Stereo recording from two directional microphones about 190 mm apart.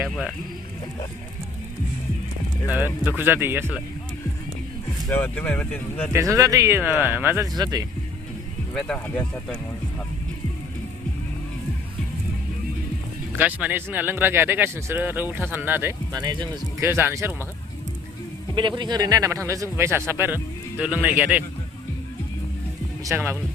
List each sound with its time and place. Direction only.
0.0 s speech: centre (ahead or behind)
2.6 s speech: 10° right (ahead or behind)
5.0 s speech: 10° left (ahead or behind)
6.1 s speech: 15° right (ahead or behind)
8.7 s speech: 5° left (ahead or behind)
13.3 s speech: 10° right (ahead or behind)
18.8 s speech: 20° right (ahead or behind)
23.0 s speech: 10° right (ahead or behind)